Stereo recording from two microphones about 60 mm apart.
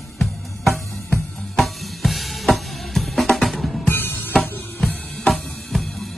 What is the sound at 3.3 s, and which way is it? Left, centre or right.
Music, centre.